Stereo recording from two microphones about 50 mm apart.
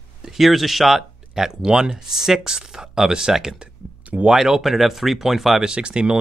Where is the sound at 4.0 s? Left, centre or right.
Right.